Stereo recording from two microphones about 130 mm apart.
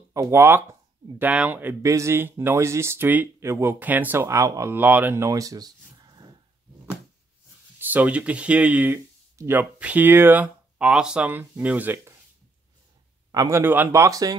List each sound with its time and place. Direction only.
0.1 s speech: 20° right (ahead or behind)
7.8 s speech: 10° right (ahead or behind)
13.3 s a man's voice: 30° right (ahead or behind)
13.6 s speech: 15° right (ahead or behind)